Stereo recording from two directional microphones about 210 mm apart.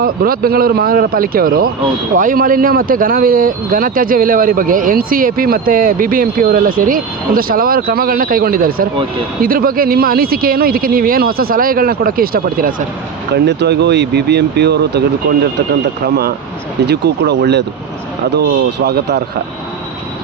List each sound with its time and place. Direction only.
0.0 s speech: 45° right (ahead or behind)
18.9 s speech: 50° right (ahead or behind)